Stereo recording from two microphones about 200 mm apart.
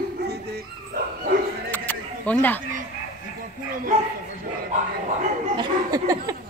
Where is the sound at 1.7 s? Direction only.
10° left (ahead or behind).